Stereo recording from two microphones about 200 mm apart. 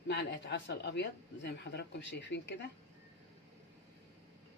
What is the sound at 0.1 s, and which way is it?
Speech, 60° left (ahead or behind).